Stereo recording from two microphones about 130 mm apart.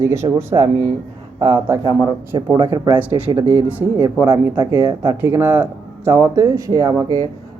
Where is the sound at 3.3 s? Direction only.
15° right (ahead or behind).